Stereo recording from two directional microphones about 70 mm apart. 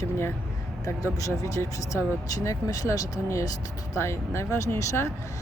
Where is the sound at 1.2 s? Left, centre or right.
Left.